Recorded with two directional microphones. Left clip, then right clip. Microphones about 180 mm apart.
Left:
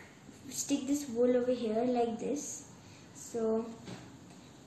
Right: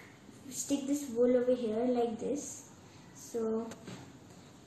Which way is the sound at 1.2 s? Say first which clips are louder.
Right 1 dB; 10° left (ahead or behind).